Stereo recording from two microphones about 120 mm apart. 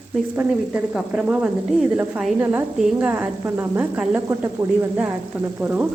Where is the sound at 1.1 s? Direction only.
10° right (ahead or behind).